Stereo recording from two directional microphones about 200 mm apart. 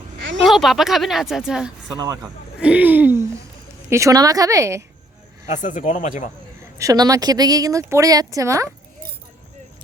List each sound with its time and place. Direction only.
0.4 s a woman's voice: centre (ahead or behind)
5.5 s speech: 40° left (ahead or behind)
6.7 s a woman's voice: 15° right (ahead or behind)